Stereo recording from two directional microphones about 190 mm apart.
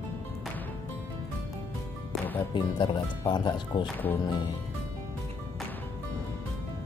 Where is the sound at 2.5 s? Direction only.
25° left (ahead or behind).